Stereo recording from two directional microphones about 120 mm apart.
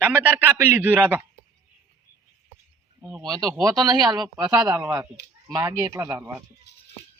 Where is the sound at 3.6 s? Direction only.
35° right (ahead or behind).